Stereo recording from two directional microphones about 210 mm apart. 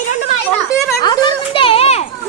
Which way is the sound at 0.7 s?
15° left (ahead or behind).